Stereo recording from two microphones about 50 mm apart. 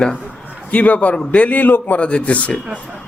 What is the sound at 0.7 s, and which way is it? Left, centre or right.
A man's voice, left.